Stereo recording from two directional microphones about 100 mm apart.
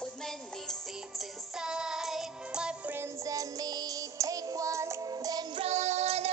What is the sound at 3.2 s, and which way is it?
Music, 35° right (ahead or behind).